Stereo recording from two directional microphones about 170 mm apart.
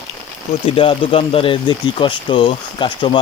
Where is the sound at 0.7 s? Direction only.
30° left (ahead or behind).